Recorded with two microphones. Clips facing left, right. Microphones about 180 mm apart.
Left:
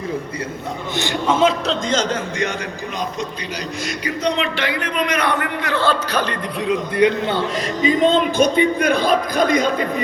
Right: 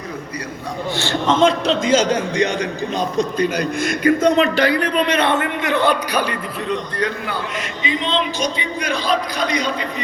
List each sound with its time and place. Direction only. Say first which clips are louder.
0.9 s a man's voice: right 1 dB; 15° left (ahead or behind); by 2.6 s 20° right (ahead or behind)
3.3 s a man's voice: right 9 dB; 50° right (ahead or behind); by 6.4 s 10° right (ahead or behind)
6.7 s a man's voice: left 7 dB; 10° left (ahead or behind)
7.8 s a man's voice: left 7 dB; 45° left (ahead or behind)